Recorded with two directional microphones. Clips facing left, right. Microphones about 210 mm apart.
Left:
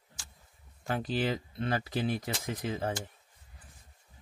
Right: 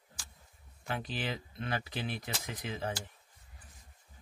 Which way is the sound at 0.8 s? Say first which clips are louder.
Left 6 dB; 40° left (ahead or behind).